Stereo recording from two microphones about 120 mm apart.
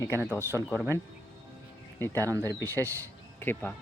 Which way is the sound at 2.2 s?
25° right (ahead or behind).